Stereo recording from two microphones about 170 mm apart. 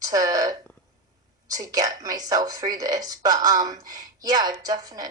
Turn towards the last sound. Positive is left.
turn(degrees=-25)  # may be behind; listen again after turning